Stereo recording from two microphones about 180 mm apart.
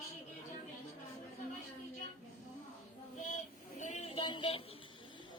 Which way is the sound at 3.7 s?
40° left (ahead or behind).